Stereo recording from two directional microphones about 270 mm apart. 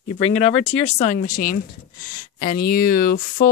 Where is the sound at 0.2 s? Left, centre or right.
Left.